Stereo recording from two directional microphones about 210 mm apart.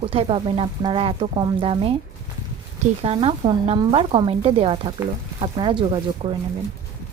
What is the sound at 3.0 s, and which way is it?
Speech, 25° right (ahead or behind).